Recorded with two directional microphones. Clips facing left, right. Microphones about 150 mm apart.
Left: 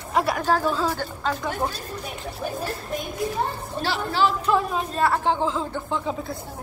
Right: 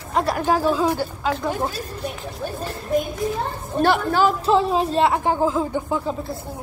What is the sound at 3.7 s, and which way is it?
Speech, 50° right (ahead or behind).